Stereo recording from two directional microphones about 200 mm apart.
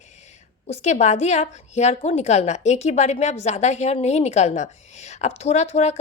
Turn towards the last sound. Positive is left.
turn(degrees=35)  # may be behind; listen again after turning